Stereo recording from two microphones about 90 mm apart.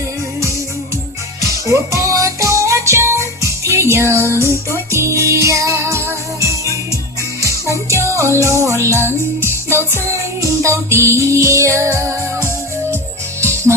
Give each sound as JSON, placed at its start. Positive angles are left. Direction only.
{"t": 1.4, "sound": "music", "side_deg": -35}